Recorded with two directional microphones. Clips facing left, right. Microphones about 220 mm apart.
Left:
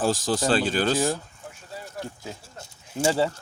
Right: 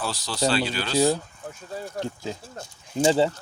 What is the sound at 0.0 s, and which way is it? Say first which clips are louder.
Speech: left 3 dB; 45° left (ahead or behind).